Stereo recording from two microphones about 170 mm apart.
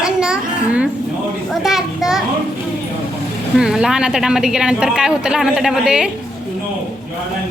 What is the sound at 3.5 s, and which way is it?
A child's voice, 5° right (ahead or behind).